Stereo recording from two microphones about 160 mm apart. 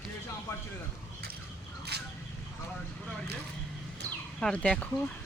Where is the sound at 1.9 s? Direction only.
90° right.